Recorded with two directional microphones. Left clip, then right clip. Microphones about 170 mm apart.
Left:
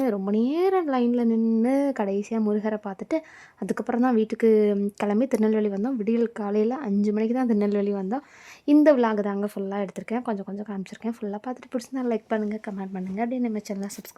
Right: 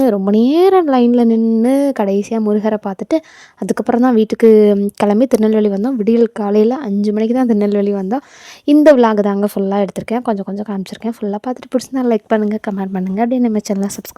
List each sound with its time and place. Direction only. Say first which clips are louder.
0.0 s speech: right 12 dB; 35° right (ahead or behind)
1.4 s a woman's voice: right 10 dB; 20° right (ahead or behind); by 13.9 s 35° right (ahead or behind)